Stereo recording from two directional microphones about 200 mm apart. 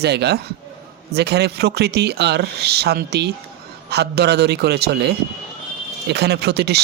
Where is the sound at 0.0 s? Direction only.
55° right (ahead or behind).